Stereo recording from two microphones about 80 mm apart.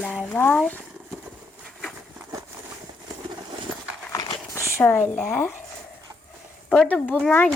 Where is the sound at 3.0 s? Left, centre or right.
Right.